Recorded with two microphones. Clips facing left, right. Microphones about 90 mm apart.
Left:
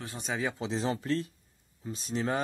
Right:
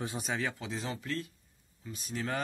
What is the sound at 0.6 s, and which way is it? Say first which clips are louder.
A man's voice: left 7 dB; 30° left (ahead or behind).